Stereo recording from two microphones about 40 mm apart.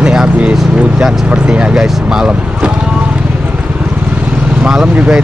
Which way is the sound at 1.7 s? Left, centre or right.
Centre.